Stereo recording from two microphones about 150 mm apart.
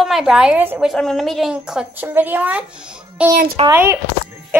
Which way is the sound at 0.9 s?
Centre (ahead or behind).